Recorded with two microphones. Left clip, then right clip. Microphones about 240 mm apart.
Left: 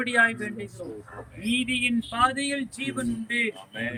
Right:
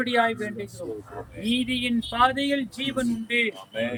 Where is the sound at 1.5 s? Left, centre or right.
Centre.